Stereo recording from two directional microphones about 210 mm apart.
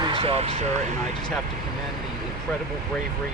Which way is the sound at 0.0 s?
25° right (ahead or behind).